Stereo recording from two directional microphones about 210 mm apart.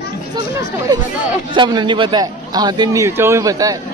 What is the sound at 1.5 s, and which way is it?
A man's voice, 20° right (ahead or behind).